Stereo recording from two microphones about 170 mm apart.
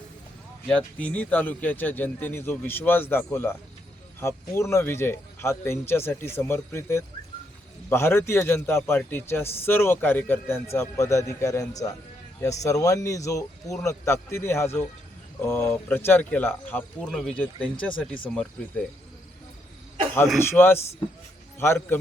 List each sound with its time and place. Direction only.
0.7 s a man's voice: 5° left (ahead or behind)
20.4 s a man's voice: 15° left (ahead or behind)